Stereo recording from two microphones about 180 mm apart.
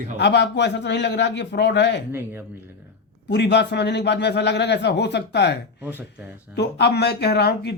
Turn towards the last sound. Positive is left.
turn(degrees=65)  # may be behind; listen again after turning